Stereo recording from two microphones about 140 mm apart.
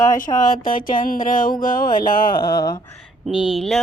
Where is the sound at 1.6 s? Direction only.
85° left.